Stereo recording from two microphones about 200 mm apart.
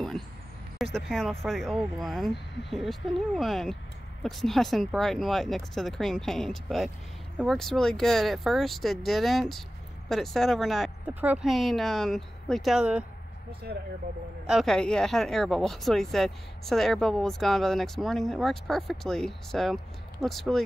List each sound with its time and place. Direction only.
0.9 s speech: centre (ahead or behind)
14.4 s speech: centre (ahead or behind)